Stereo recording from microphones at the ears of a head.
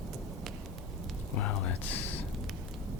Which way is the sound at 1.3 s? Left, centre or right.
Left.